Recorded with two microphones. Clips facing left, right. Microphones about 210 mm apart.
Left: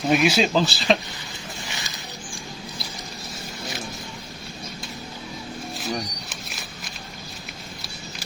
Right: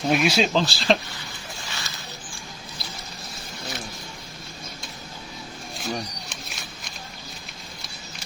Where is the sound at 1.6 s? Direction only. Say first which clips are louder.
Even; 15° left (ahead or behind).